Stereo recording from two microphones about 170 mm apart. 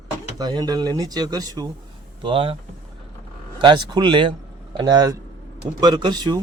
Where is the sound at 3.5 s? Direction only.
25° right (ahead or behind).